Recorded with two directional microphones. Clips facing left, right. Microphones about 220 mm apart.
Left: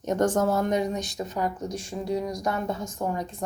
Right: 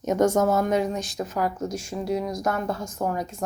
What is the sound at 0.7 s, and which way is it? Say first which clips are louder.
Speech: right 2 dB; 20° left (ahead or behind).